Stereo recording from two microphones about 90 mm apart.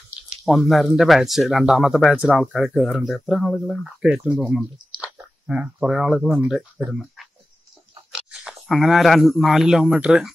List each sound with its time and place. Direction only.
0.6 s speech: centre (ahead or behind)
4.0 s speech: 10° right (ahead or behind)
6.8 s speech: 20° right (ahead or behind)
8.1 s speech: 5° right (ahead or behind)